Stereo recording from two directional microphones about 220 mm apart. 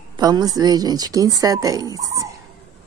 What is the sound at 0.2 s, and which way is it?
Speech, 15° right (ahead or behind).